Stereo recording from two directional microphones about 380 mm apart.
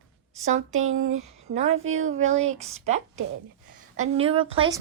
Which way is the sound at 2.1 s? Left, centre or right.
Centre.